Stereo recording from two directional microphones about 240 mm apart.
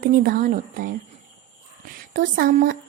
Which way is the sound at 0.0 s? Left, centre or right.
Right.